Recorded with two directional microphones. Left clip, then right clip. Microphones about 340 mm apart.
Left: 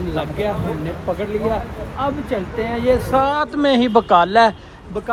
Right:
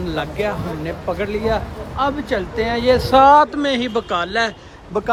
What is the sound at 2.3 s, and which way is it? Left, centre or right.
Speech, centre.